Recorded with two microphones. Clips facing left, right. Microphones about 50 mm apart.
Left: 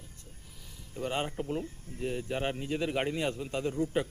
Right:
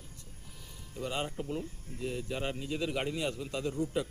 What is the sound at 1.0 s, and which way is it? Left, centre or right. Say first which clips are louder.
A man's voice: left 3 dB; left.